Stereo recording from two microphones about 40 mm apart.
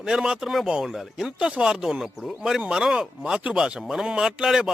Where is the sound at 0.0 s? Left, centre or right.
Centre.